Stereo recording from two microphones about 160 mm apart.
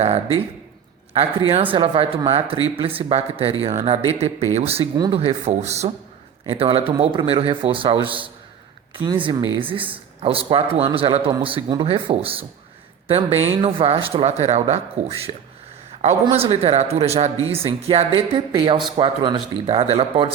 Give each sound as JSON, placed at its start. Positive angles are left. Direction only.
{"t": 1.7, "sound": "a man's voice", "side_deg": -35}
{"t": 4.9, "sound": "speech", "side_deg": -25}
{"t": 5.2, "sound": "a man's voice", "side_deg": -40}